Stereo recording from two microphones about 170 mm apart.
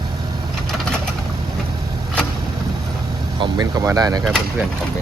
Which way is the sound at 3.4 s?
25° right (ahead or behind).